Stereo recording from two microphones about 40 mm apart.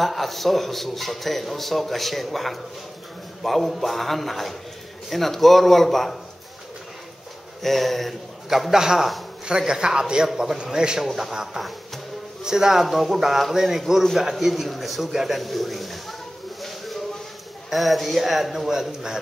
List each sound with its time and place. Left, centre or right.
0.0 s a man's voice: centre
7.6 s a man's voice: centre
8.5 s a man's voice: centre
10.2 s speech: centre
10.6 s a man's voice: right
12.4 s speech: centre
12.8 s a man's voice: centre
17.6 s a man's voice: centre